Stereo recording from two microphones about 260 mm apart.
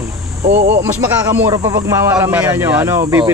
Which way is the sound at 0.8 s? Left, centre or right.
Centre.